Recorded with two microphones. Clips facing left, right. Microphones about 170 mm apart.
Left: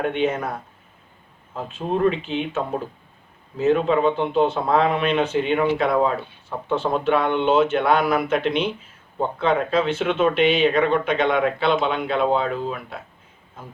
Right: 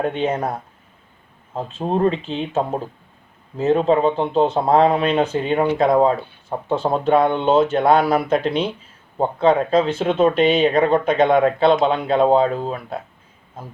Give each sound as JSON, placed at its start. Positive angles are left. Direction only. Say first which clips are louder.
{"t": 0.1, "sound": "speech", "louder": "right 1 dB", "side_deg": -35}
{"t": 1.9, "sound": "speech", "louder": "right 1 dB", "side_deg": -35}